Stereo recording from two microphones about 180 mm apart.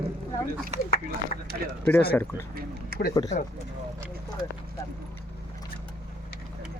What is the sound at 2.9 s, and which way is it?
Speech, 55° right (ahead or behind).